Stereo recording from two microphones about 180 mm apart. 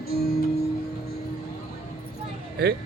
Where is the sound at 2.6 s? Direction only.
65° right (ahead or behind).